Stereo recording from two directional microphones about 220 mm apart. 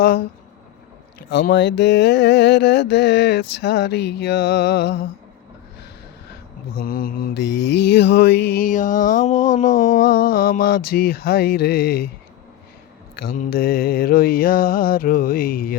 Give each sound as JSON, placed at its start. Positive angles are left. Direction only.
{"t": 1.3, "sound": "mantra", "side_deg": 50}
{"t": 6.8, "sound": "mantra", "side_deg": 40}
{"t": 13.1, "sound": "mantra", "side_deg": 40}